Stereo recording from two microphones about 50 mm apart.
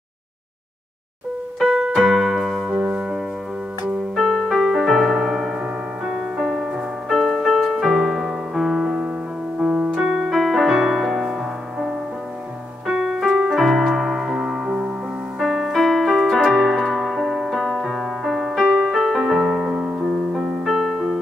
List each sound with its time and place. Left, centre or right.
1.6 s keyboard: centre
2.8 s music: centre
4.1 s keyboard: centre
6.3 s music: centre
9.6 s piano: centre
10.3 s music: centre
12.8 s keyboard: centre
15.4 s piano: centre
18.8 s music: centre
19.7 s music: centre
20.6 s music: centre